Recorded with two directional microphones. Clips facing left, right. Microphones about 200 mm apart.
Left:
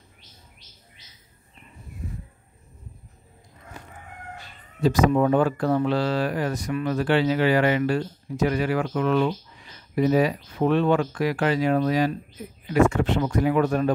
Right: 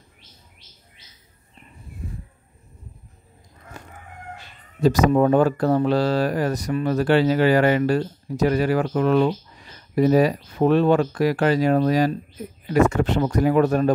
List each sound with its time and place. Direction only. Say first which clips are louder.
5.1 s speech: right 3 dB; 40° right (ahead or behind)